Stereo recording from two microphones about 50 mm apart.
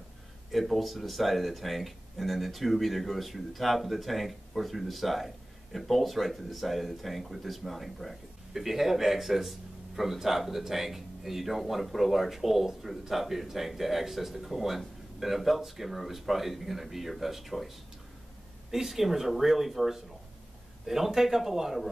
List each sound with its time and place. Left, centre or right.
0.5 s speech: centre